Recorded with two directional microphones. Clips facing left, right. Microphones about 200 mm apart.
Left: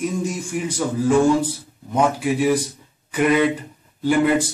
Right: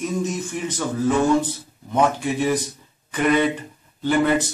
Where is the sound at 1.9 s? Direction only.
10° left (ahead or behind).